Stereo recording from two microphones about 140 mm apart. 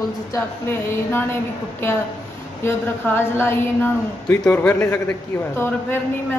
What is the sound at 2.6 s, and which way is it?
Speech, 15° left (ahead or behind).